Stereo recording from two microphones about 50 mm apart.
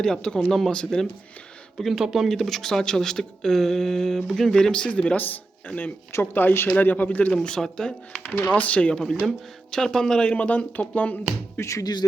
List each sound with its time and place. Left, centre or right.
0.0 s speech: centre
1.8 s speech: centre
2.3 s speech: centre; by 5.2 s left
5.2 s speech: left
6.3 s speech: left
6.7 s speech: left
7.4 s speech: centre
8.2 s speech: left; by 10.3 s centre
10.3 s speech: left